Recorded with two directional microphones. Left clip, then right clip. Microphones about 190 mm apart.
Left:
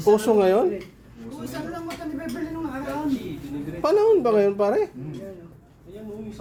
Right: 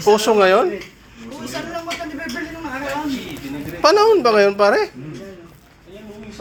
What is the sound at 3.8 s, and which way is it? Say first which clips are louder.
Speech: right 6 dB; centre (ahead or behind).